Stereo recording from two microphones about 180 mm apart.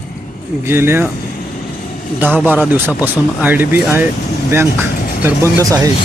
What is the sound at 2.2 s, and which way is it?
Speech, 10° right (ahead or behind).